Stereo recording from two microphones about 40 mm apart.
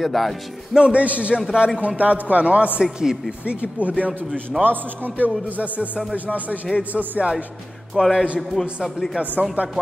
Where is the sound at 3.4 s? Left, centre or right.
Right.